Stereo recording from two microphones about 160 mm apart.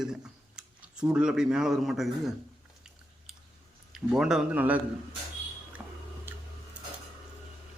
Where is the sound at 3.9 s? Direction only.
5° right (ahead or behind).